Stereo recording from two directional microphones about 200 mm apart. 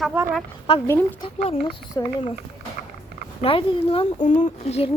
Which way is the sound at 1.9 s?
20° left (ahead or behind).